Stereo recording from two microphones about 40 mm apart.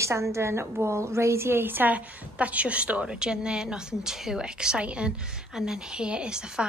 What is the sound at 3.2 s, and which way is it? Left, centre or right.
A woman's voice, right.